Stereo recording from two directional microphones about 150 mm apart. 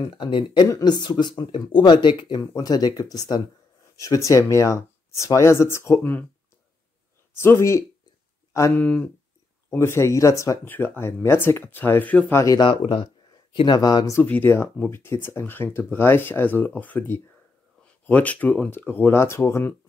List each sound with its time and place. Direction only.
0.1 s speech: 35° left (ahead or behind); by 6.2 s 15° left (ahead or behind)
7.3 s speech: 15° left (ahead or behind)
14.2 s speech: 10° left (ahead or behind)